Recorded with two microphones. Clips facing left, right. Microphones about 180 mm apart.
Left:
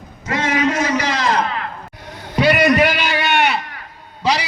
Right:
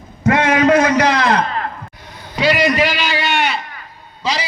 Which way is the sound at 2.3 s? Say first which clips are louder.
Left 2 dB; 60° left (ahead or behind).